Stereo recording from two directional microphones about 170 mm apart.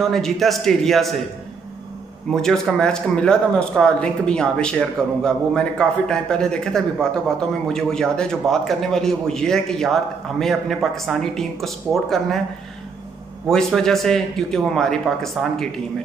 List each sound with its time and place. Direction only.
0.0 s speech: centre (ahead or behind)
2.4 s speech: 5° left (ahead or behind)
13.5 s speech: 5° left (ahead or behind)